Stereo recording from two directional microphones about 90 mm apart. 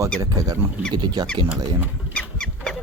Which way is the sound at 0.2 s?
45° right (ahead or behind).